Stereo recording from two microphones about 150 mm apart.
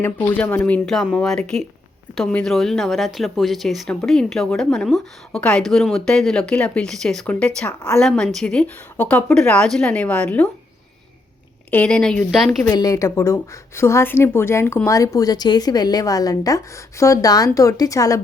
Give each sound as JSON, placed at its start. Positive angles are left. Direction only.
{"t": 0.0, "sound": "a woman's voice", "side_deg": 10}
{"t": 11.7, "sound": "speech", "side_deg": 10}
{"t": 12.6, "sound": "a woman's voice", "side_deg": 25}